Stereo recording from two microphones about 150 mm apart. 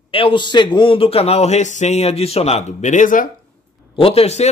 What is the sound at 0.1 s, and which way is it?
A man's voice, 35° left (ahead or behind).